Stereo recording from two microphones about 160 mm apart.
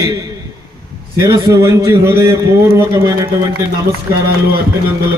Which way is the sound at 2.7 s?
20° right (ahead or behind).